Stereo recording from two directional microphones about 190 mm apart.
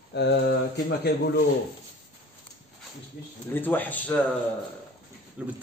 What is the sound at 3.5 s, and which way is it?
Speech, 10° left (ahead or behind).